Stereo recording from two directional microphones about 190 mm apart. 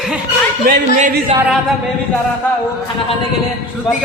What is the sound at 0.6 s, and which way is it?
Speech, 50° right (ahead or behind).